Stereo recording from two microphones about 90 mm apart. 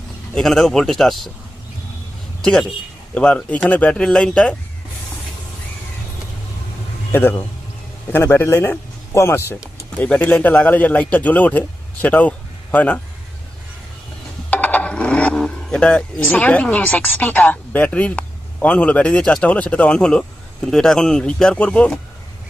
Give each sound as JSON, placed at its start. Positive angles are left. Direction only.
{"t": 0.3, "sound": "speech", "side_deg": 5}
{"t": 2.4, "sound": "a man's voice", "side_deg": 5}
{"t": 7.1, "sound": "a man's voice", "side_deg": 25}
{"t": 10.0, "sound": "speech", "side_deg": 15}
{"t": 14.5, "sound": "speech", "side_deg": 20}